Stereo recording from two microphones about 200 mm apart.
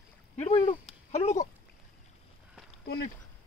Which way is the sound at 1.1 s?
35° left (ahead or behind).